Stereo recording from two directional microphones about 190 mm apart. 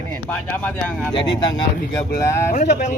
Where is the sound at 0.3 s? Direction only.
10° left (ahead or behind).